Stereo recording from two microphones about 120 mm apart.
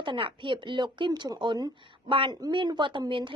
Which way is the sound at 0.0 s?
45° right (ahead or behind).